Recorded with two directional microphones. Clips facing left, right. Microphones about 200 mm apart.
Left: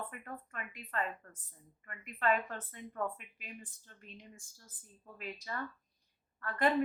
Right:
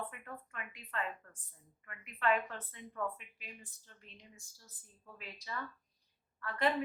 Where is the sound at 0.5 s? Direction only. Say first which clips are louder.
Left 3 dB; 40° left (ahead or behind).